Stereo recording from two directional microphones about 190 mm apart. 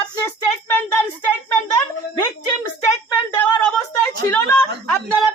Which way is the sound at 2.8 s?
15° left (ahead or behind).